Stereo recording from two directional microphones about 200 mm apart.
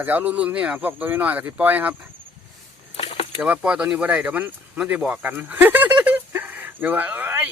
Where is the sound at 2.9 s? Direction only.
30° left (ahead or behind).